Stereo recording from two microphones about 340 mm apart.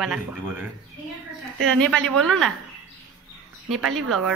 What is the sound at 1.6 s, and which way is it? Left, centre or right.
Speech, centre.